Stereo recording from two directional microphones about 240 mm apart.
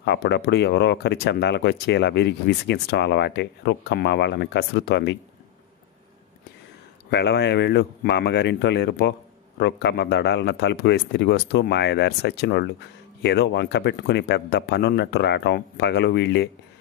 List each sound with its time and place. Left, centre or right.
0.0 s speech: left
7.1 s speech: left